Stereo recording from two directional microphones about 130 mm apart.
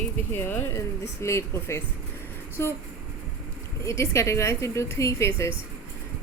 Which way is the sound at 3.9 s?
20° left (ahead or behind).